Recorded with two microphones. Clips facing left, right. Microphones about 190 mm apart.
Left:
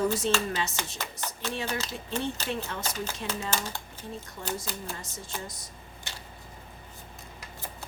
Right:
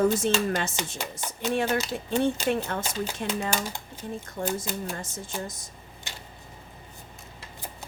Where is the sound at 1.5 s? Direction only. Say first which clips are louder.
Right 8 dB; 55° right (ahead or behind).